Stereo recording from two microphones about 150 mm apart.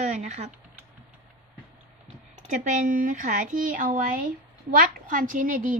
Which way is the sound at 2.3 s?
55° right (ahead or behind).